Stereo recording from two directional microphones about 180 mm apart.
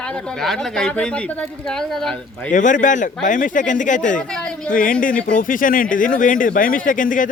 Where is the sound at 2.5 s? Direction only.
45° left (ahead or behind).